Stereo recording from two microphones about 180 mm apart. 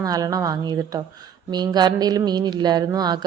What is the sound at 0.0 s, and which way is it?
A man's voice, 20° right (ahead or behind).